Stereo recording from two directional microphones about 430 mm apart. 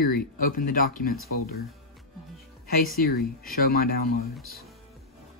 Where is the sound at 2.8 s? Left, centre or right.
Left.